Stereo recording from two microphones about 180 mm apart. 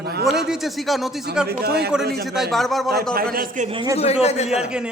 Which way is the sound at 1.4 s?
60° right (ahead or behind).